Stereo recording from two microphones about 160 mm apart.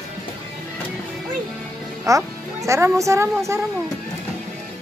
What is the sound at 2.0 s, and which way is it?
A woman's voice, 20° right (ahead or behind).